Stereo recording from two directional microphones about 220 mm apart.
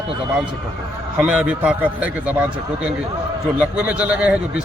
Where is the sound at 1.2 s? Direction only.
5° right (ahead or behind).